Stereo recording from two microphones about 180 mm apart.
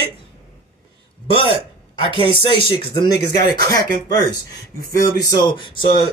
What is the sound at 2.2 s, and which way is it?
A man's voice, 30° left (ahead or behind).